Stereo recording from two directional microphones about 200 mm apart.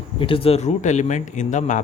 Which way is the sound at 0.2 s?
25° left (ahead or behind).